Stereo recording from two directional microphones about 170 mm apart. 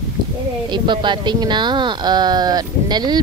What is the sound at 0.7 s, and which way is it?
Speech, 25° right (ahead or behind).